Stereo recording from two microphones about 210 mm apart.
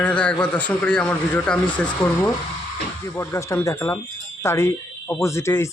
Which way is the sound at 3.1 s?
15° left (ahead or behind).